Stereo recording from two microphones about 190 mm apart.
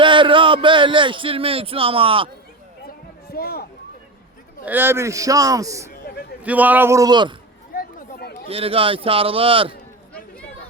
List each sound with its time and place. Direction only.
0.0 s a sound: 25° right (ahead or behind)
3.3 s speech: 55° left (ahead or behind)
4.6 s a man's voice: 10° right (ahead or behind)
7.7 s chatter: 50° left (ahead or behind)
8.4 s a man's voice: 30° right (ahead or behind)